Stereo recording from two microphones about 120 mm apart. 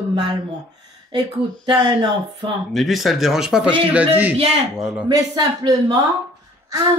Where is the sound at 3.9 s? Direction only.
15° right (ahead or behind).